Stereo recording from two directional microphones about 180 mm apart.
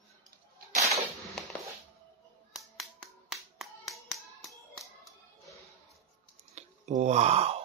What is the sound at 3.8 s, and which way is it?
Hands, centre (ahead or behind).